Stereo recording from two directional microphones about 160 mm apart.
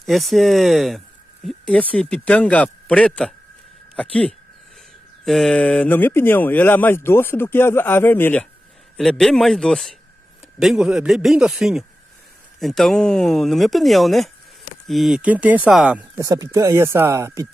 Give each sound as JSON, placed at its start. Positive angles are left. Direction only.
{"t": 0.0, "sound": "speech", "side_deg": 0}
{"t": 16.2, "sound": "speech", "side_deg": -20}